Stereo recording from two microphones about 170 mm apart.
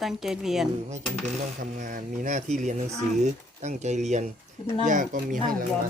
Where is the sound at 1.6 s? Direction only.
50° right (ahead or behind).